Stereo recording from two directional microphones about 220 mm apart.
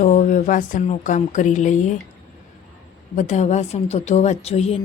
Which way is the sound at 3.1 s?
35° left (ahead or behind).